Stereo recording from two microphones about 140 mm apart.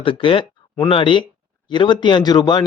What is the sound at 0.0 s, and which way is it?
A man's voice, 40° left (ahead or behind).